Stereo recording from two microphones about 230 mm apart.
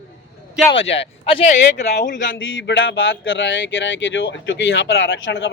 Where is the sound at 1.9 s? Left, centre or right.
Left.